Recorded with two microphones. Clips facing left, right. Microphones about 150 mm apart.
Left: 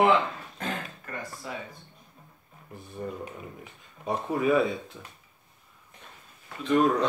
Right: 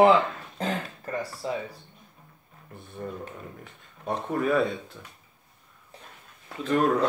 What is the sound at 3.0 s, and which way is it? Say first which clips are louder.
Speech: even; 5° left (ahead or behind).